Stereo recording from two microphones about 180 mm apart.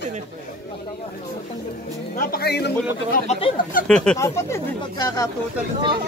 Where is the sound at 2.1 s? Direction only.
60° left (ahead or behind).